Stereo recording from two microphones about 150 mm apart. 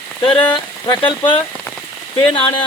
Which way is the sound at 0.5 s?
30° left (ahead or behind).